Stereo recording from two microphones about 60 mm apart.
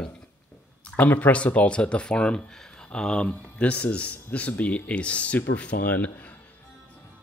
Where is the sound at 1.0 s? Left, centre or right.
Left.